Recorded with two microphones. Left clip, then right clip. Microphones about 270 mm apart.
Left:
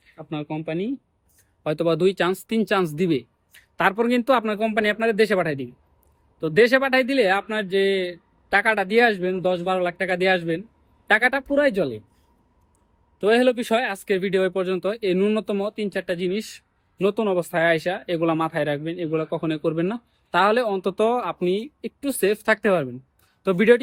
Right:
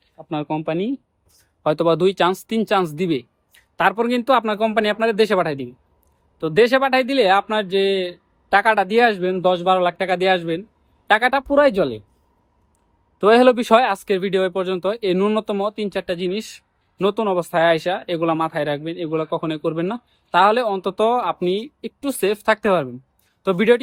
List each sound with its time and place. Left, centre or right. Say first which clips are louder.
0.2 s speech: right 6 dB; centre
13.1 s speech: right 6 dB; centre